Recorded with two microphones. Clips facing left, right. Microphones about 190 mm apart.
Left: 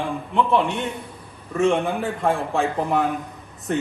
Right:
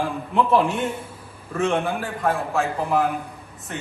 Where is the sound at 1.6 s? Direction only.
25° left (ahead or behind).